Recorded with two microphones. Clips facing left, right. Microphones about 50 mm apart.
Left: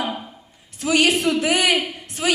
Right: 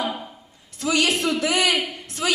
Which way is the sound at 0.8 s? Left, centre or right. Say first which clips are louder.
Left 3 dB; left.